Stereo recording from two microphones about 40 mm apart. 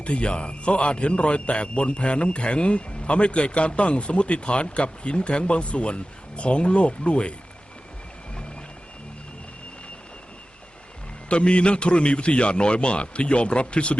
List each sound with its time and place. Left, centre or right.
0.0 s a man's voice: left
11.3 s a man's voice: left